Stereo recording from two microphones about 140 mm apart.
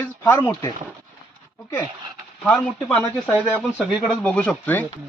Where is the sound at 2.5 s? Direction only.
10° left (ahead or behind).